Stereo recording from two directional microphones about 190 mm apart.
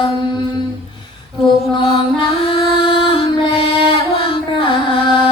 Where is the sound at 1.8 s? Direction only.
30° left (ahead or behind).